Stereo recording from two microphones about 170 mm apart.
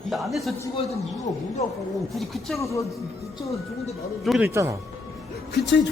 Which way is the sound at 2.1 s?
Centre (ahead or behind).